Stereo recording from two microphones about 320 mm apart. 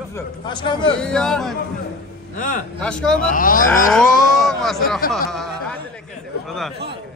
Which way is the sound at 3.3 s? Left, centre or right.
Left.